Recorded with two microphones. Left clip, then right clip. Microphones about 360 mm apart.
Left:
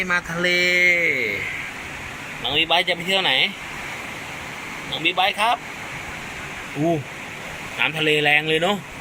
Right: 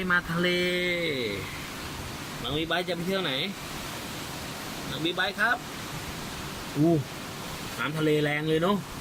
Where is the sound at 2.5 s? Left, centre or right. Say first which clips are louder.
Left 10 dB; left.